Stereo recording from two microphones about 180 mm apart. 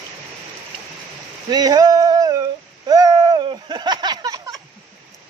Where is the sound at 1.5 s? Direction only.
20° right (ahead or behind).